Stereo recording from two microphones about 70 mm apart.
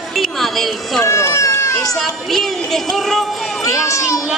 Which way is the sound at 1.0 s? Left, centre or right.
Left.